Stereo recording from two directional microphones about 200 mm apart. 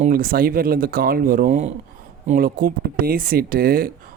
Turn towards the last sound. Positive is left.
turn(degrees=-45)  # may be behind; listen again after turning